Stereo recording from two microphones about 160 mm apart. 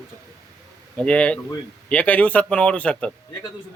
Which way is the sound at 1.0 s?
5° left (ahead or behind).